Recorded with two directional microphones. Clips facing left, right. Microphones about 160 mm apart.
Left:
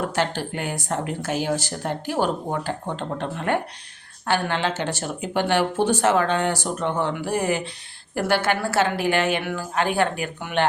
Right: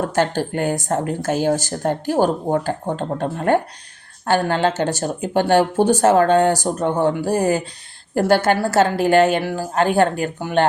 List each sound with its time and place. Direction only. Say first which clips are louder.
0.1 s speech: right 5 dB; 45° right (ahead or behind)